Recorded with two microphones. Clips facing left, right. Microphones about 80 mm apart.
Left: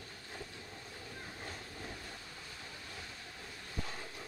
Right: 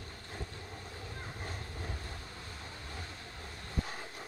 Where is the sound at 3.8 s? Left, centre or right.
Right.